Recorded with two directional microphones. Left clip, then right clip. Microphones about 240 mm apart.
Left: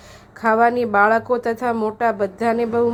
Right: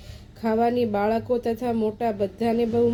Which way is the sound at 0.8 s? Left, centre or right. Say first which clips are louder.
Left 8 dB; centre.